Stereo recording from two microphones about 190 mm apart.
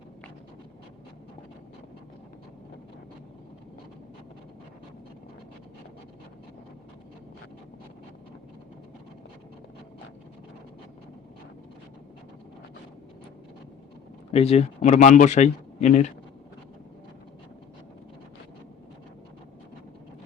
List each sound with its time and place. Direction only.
14.3 s speech: 30° left (ahead or behind)